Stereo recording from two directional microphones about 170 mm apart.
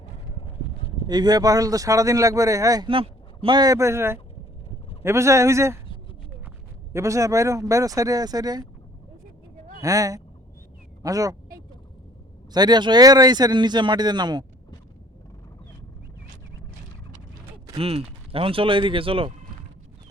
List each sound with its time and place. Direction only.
0.3 s a sound: 35° left (ahead or behind)
1.0 s speech: 25° right (ahead or behind)
6.9 s speech: 20° right (ahead or behind)
9.8 s speech: 20° right (ahead or behind)
12.5 s speech: 25° right (ahead or behind)
17.7 s speech: 35° right (ahead or behind)